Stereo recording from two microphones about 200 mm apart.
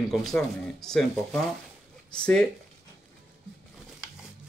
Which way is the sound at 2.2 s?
5° left (ahead or behind).